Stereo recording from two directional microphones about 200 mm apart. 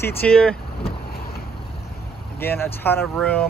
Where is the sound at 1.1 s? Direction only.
50° left (ahead or behind).